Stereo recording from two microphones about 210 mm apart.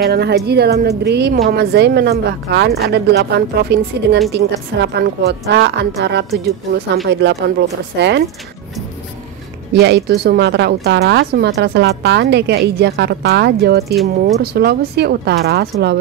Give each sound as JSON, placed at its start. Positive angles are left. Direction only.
{"t": 0.0, "sound": "speech", "side_deg": -50}
{"t": 9.8, "sound": "speech", "side_deg": -50}